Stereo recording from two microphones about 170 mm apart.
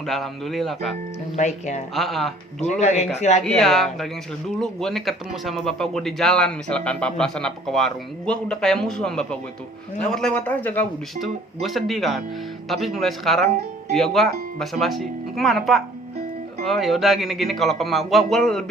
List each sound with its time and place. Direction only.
0.0 s speech: centre (ahead or behind)
1.4 s speech: 45° left (ahead or behind)
2.0 s speech: centre (ahead or behind)
2.8 s a man's voice: 40° left (ahead or behind)
3.4 s a man's voice: centre (ahead or behind)
11.2 s speech: centre (ahead or behind)